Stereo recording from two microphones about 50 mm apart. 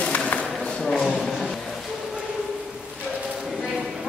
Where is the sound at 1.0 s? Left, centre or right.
Centre.